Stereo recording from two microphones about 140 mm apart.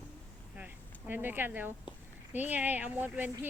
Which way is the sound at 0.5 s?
10° right (ahead or behind).